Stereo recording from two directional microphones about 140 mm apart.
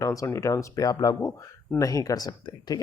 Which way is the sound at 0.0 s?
25° left (ahead or behind).